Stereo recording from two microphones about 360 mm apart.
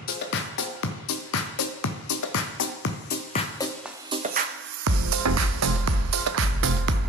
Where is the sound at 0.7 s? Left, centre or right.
Left.